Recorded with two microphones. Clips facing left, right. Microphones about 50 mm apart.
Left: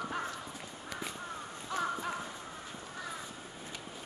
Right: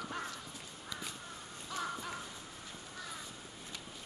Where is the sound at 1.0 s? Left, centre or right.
Left.